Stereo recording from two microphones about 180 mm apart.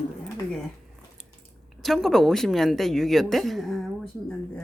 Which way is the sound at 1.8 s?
Centre (ahead or behind).